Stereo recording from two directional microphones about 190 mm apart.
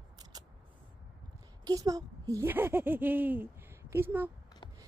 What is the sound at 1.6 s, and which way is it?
A woman's voice, 20° right (ahead or behind).